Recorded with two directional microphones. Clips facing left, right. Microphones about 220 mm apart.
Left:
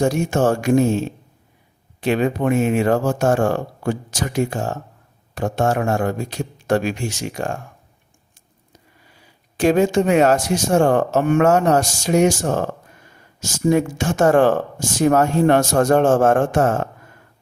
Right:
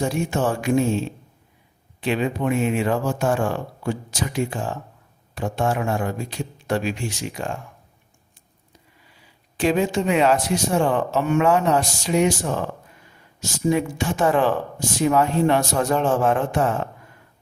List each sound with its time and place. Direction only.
0.0 s speech: 45° left (ahead or behind)
9.0 s speech: 45° left (ahead or behind)